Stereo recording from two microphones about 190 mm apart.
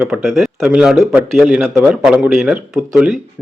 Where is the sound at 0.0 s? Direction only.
5° right (ahead or behind).